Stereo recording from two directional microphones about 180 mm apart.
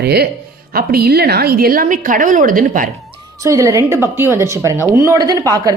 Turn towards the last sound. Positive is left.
turn(degrees=-20)  # may be behind; listen again after turning